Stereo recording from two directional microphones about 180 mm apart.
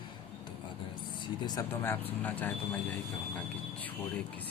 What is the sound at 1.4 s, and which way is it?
Speech, 15° left (ahead or behind).